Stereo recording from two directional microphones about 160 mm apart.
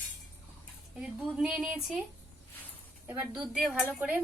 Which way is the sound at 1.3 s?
5° right (ahead or behind).